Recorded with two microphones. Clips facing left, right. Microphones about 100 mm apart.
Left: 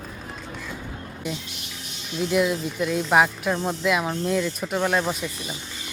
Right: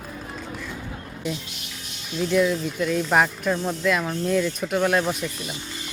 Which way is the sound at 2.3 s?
5° left (ahead or behind).